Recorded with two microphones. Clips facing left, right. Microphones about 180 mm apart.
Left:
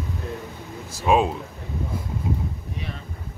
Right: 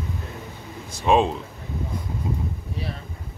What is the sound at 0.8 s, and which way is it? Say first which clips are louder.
Speech: right 1 dB; 5° left (ahead or behind).